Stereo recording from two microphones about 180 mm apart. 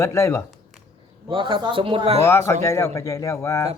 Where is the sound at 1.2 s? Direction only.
25° right (ahead or behind).